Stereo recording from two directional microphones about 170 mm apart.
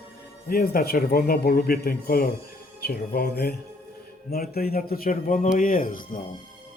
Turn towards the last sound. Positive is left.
turn(degrees=55)  # may be behind; listen again after turning